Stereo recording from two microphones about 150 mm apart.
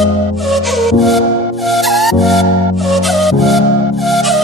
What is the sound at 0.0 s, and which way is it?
Music, centre (ahead or behind).